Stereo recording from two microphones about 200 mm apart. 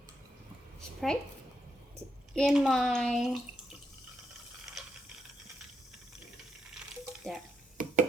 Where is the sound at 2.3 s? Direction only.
Centre (ahead or behind).